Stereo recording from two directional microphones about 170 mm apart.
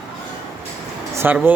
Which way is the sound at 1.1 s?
15° right (ahead or behind).